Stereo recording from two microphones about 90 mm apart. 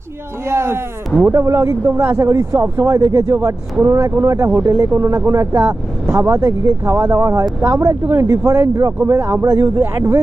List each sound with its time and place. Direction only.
0.4 s speech: 30° right (ahead or behind)